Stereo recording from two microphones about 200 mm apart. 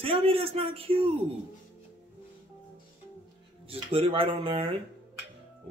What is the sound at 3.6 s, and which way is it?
Speech, 30° right (ahead or behind).